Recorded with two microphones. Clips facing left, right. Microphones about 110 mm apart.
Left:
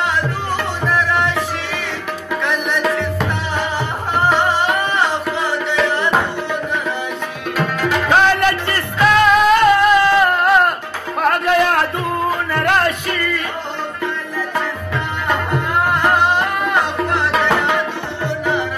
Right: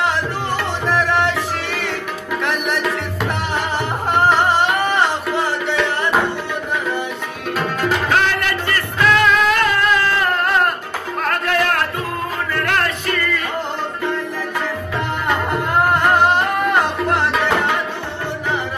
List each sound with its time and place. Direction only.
8.6 s music: 20° left (ahead or behind)
10.4 s music: 5° left (ahead or behind)
11.2 s music: 15° left (ahead or behind)